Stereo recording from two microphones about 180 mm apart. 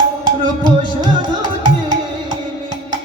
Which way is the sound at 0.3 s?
25° right (ahead or behind).